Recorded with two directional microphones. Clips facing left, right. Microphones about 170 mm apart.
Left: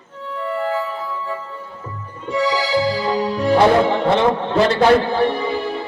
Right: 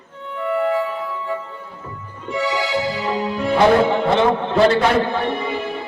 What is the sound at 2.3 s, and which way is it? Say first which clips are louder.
Music: left 3 dB; 35° left (ahead or behind).